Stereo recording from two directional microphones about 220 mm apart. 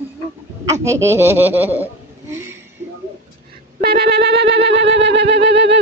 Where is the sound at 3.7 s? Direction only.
45° right (ahead or behind).